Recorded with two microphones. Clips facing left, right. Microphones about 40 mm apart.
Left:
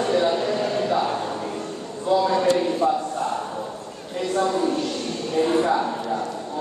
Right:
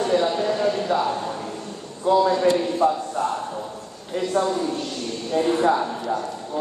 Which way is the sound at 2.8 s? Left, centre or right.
Right.